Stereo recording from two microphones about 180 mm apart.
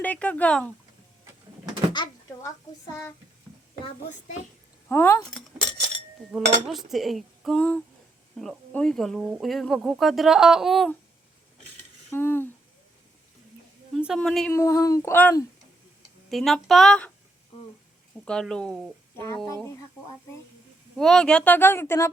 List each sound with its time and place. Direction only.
0.0 s speech: 5° left (ahead or behind)
1.9 s door: 25° left (ahead or behind)
4.9 s speech: 15° left (ahead or behind)
6.7 s speech: centre (ahead or behind)
12.1 s speech: 10° left (ahead or behind)
13.9 s speech: centre (ahead or behind)
14.5 s speech: 15° left (ahead or behind)
18.3 s speech: 5° left (ahead or behind)
19.1 s speech: 15° left (ahead or behind)
21.0 s speech: 5° left (ahead or behind)